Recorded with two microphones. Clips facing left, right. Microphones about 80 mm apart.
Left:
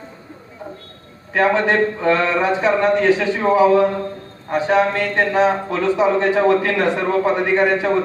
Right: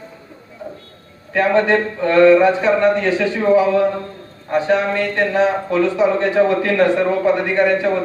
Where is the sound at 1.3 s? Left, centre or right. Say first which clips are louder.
Right 1 dB; centre.